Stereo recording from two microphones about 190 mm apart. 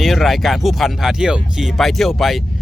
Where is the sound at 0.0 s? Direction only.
Centre (ahead or behind).